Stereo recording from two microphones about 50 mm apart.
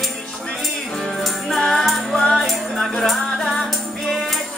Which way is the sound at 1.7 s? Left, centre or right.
Centre.